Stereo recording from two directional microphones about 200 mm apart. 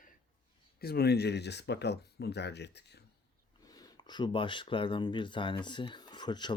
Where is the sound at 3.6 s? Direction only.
20° left (ahead or behind).